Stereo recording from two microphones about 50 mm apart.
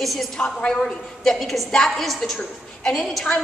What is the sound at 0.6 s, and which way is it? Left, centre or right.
A woman's voice, centre.